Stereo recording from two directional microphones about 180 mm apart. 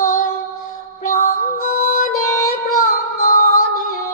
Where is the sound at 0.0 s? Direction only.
50° left (ahead or behind).